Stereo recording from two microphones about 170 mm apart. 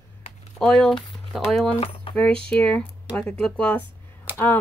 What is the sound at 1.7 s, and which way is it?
Speech, 30° left (ahead or behind).